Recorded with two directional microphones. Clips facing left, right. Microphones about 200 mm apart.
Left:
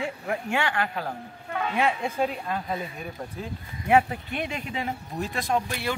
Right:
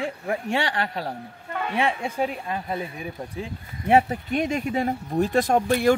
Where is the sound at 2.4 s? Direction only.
10° right (ahead or behind).